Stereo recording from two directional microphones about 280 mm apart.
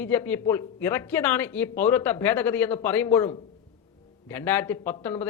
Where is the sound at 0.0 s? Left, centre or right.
Centre.